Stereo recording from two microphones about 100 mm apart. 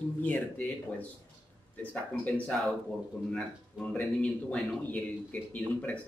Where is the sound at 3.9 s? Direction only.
15° left (ahead or behind).